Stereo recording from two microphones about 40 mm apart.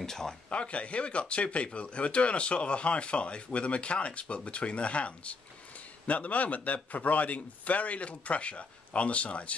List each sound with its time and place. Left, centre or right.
0.0 s speech: centre
0.5 s speech: left